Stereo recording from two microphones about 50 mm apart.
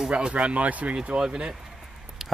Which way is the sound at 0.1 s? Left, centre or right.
Right.